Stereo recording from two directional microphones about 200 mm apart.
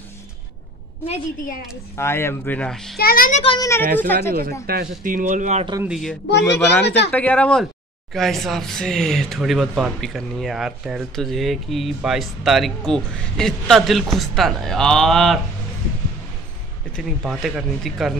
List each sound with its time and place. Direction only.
1.0 s a woman's voice: 30° left (ahead or behind)
2.0 s speech: 10° left (ahead or behind)
3.0 s a child's voice: 45° left (ahead or behind)
3.4 s speech: 20° left (ahead or behind)
3.8 s speech: 45° right (ahead or behind)
5.9 s speech: centre (ahead or behind)
6.4 s speech: 15° left (ahead or behind)
6.8 s speech: 60° left (ahead or behind)
7.1 s speech: 10° left (ahead or behind)
16.9 s speech: centre (ahead or behind)